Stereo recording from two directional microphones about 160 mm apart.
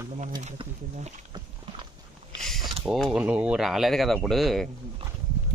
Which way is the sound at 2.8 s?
Centre (ahead or behind).